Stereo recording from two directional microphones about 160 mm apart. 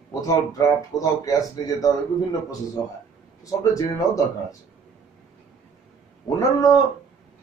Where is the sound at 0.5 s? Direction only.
20° left (ahead or behind).